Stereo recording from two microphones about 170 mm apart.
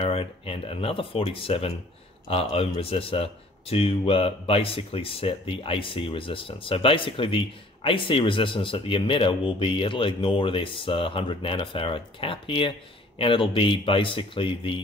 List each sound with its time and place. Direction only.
0.0 s speech: 35° left (ahead or behind)